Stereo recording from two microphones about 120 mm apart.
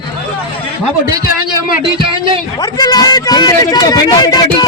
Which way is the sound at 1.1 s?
35° right (ahead or behind).